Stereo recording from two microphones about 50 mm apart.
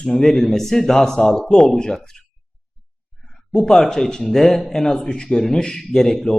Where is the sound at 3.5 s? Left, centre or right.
Centre.